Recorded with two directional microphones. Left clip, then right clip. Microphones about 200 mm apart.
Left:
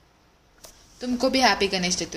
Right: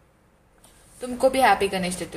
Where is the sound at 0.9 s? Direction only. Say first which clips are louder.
Right 2 dB; 20° left (ahead or behind).